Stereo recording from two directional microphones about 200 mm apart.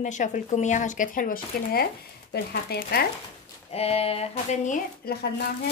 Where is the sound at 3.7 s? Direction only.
30° left (ahead or behind).